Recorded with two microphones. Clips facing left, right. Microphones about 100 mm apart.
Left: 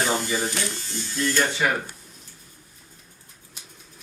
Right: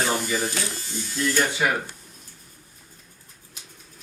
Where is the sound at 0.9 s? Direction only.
15° right (ahead or behind).